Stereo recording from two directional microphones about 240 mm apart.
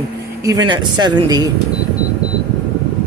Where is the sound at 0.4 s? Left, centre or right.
Centre.